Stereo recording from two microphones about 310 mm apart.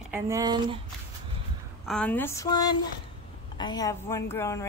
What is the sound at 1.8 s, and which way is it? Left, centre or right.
A woman's voice, centre.